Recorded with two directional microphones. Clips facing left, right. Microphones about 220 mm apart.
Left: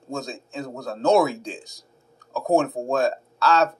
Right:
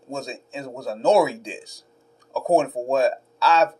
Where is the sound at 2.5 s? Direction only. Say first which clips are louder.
Right 1 dB; 15° right (ahead or behind).